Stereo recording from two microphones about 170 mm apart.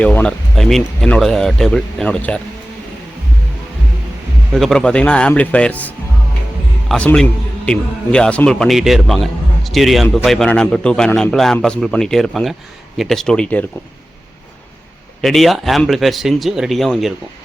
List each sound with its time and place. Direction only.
0.0 s a man's voice: 10° left (ahead or behind)
4.5 s a man's voice: centre (ahead or behind)
15.2 s a man's voice: centre (ahead or behind)